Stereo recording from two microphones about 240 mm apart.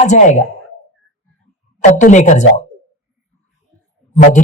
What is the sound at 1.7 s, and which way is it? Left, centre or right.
Speech, left.